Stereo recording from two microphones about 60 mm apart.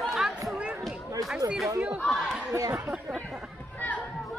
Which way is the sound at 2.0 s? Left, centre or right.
Centre.